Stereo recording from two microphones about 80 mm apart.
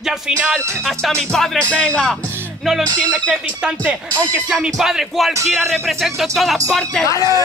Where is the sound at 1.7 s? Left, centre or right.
Centre.